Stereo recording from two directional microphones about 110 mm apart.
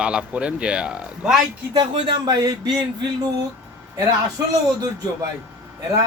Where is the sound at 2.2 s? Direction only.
40° right (ahead or behind).